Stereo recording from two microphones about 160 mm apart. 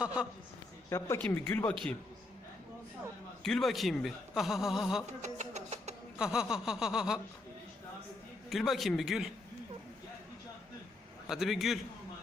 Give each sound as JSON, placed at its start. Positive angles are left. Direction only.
{"t": 0.0, "sound": "a man's voice", "side_deg": -5}
{"t": 0.9, "sound": "speech", "side_deg": 15}
{"t": 3.4, "sound": "a man's voice", "side_deg": 0}
{"t": 5.2, "sound": "music", "side_deg": -45}
{"t": 6.1, "sound": "a man's voice", "side_deg": -5}
{"t": 8.4, "sound": "a man's voice", "side_deg": 0}
{"t": 11.3, "sound": "a man's voice", "side_deg": 0}